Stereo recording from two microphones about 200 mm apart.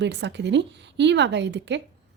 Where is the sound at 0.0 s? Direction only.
60° right (ahead or behind).